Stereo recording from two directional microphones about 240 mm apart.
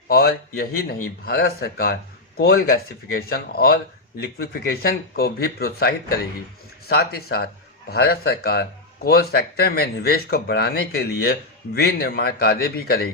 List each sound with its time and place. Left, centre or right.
0.1 s speech: left